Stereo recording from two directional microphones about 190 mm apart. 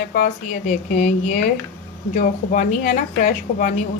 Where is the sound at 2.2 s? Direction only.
45° left (ahead or behind).